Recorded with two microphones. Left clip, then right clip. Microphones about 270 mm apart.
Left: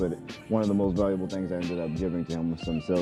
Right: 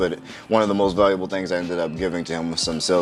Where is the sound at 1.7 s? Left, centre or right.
Centre.